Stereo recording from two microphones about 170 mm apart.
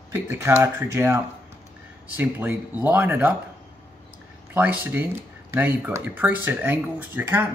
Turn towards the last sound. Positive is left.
turn(degrees=-10)  # may be behind; listen again after turning